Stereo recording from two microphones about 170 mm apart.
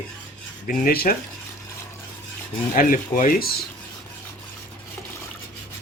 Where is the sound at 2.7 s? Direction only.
55° left (ahead or behind).